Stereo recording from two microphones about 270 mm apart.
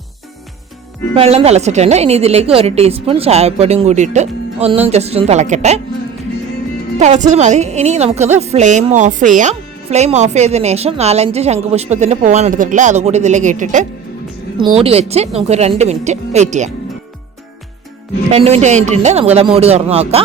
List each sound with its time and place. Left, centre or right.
1.1 s a woman's voice: right
7.0 s a woman's voice: right
18.3 s a woman's voice: right